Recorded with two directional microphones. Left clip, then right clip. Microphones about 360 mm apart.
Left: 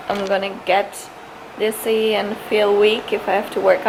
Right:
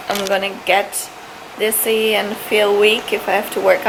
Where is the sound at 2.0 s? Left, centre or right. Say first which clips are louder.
Right 2 dB; centre.